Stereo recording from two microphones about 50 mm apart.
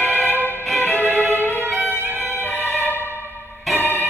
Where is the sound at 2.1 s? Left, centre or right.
Left.